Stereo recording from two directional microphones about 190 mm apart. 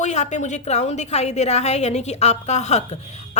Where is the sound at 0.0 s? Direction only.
35° left (ahead or behind).